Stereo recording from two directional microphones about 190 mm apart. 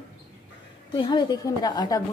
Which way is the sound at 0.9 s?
20° left (ahead or behind).